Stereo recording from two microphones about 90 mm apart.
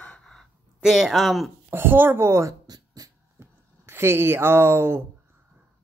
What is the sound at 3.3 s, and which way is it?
Speech, 30° right (ahead or behind).